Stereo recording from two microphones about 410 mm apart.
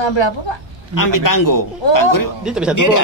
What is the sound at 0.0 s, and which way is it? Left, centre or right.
Speech, left.